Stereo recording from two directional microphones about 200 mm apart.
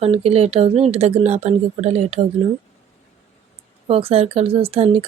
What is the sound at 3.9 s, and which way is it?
Speech, 30° right (ahead or behind).